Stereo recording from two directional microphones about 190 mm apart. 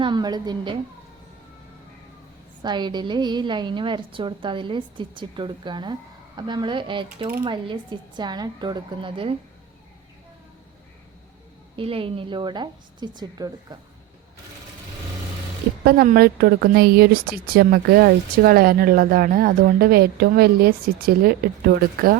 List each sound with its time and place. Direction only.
0.0 s a woman's voice: 20° right (ahead or behind)
2.6 s a woman's voice: 25° right (ahead or behind)
11.8 s a woman's voice: 30° right (ahead or behind)
15.8 s speech: 50° right (ahead or behind)